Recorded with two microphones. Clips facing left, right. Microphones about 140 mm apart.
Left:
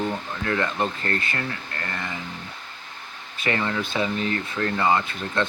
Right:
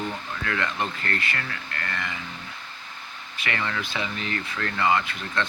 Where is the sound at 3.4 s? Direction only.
25° left (ahead or behind).